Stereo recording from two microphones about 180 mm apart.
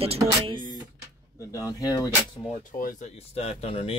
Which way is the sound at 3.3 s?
35° left (ahead or behind).